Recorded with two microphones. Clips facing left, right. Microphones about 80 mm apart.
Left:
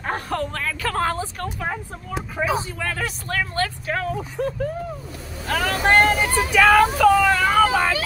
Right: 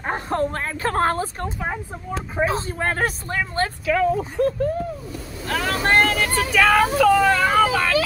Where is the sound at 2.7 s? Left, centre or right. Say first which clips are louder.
Right 4 dB; right.